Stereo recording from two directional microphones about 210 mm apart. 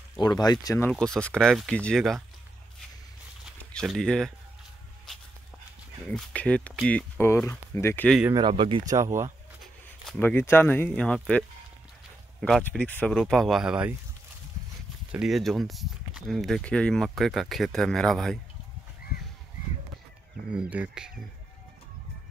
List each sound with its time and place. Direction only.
0.2 s speech: 20° left (ahead or behind)
0.9 s speech: centre (ahead or behind)
3.4 s a sound: centre (ahead or behind)
6.0 s speech: 5° left (ahead or behind)
8.4 s speech: 25° right (ahead or behind)
10.0 s speech: 5° left (ahead or behind)
15.0 s speech: 5° right (ahead or behind)
20.7 s speech: 5° right (ahead or behind)